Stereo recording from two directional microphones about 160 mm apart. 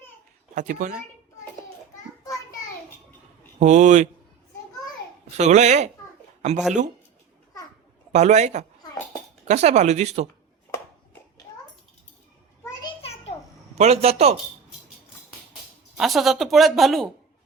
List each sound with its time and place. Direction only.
0.5 s speech: 55° right (ahead or behind)
3.6 s speech: 45° right (ahead or behind)
5.4 s speech: 45° right (ahead or behind)
8.1 s speech: 45° right (ahead or behind)
10.7 s a sound: 15° left (ahead or behind)
13.0 s a sound: 40° left (ahead or behind)
13.7 s a man's voice: 40° right (ahead or behind)
16.0 s speech: centre (ahead or behind)